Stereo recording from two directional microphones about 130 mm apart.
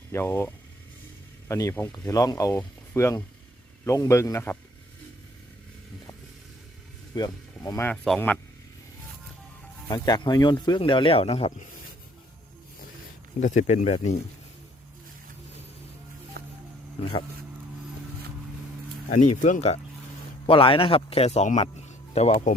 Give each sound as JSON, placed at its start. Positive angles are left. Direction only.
{"t": 0.1, "sound": "a man's voice", "side_deg": 20}
{"t": 7.2, "sound": "speech", "side_deg": 30}
{"t": 8.1, "sound": "speech", "side_deg": 5}
{"t": 9.9, "sound": "speech", "side_deg": 30}
{"t": 13.4, "sound": "speech", "side_deg": 75}
{"t": 17.0, "sound": "speech", "side_deg": 40}
{"t": 19.0, "sound": "speech", "side_deg": 75}
{"t": 20.5, "sound": "speech", "side_deg": 45}